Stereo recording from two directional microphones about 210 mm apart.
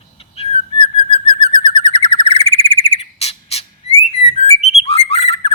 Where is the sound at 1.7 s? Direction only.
25° left (ahead or behind).